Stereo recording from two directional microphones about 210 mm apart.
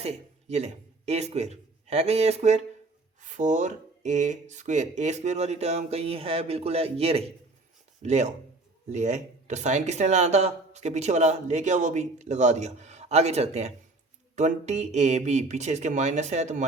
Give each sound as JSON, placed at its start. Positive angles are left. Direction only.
{"t": 0.0, "sound": "a man's voice", "side_deg": -30}